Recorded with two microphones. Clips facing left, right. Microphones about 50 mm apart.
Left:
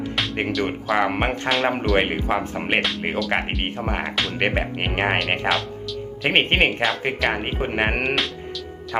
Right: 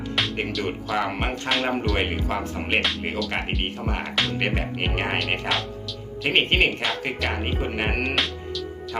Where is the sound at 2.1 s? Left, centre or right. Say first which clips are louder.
Left 4 dB; centre.